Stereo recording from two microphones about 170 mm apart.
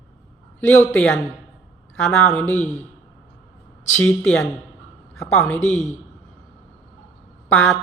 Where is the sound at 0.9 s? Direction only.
5° left (ahead or behind).